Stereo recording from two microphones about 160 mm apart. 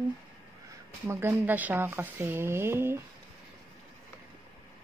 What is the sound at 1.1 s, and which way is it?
Speech, 15° right (ahead or behind).